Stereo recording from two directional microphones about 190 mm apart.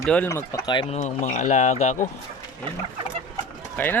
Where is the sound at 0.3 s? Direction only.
15° left (ahead or behind).